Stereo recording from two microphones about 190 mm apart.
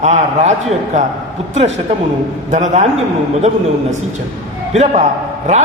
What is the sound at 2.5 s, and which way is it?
Speech, 40° right (ahead or behind).